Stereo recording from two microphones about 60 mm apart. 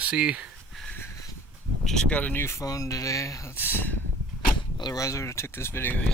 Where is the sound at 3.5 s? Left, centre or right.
Left.